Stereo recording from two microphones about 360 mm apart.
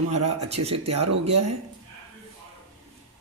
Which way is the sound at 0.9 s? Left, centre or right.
Right.